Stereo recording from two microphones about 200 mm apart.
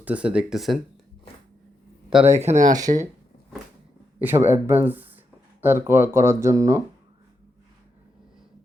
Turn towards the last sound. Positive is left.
turn(degrees=-15)  # may be behind; listen again after turning